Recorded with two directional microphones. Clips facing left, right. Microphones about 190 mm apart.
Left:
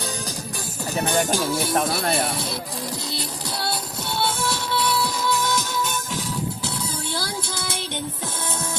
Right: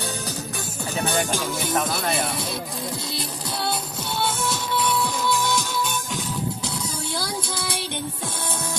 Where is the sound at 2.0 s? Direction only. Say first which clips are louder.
Left 2 dB; 50° left (ahead or behind).